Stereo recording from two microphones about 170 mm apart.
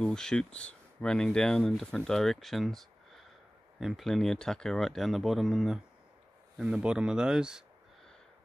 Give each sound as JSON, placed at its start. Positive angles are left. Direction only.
{"t": 0.0, "sound": "speech", "side_deg": 5}